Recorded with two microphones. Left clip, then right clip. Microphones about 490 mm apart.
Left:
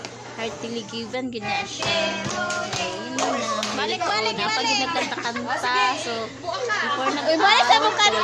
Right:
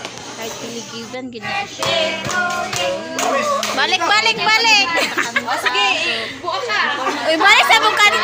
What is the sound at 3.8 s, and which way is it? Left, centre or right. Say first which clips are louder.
A child's voice: right 10 dB; left.